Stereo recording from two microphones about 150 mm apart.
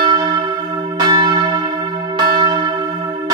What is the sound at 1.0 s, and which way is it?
Church bell, 30° right (ahead or behind).